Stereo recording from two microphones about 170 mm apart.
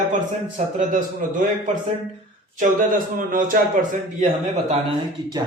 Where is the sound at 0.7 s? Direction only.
50° right (ahead or behind).